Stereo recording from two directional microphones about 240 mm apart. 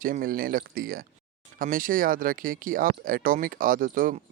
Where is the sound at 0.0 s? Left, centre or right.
Right.